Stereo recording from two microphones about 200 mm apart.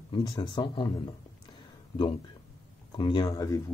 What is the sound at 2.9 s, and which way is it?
Speech, 25° left (ahead or behind).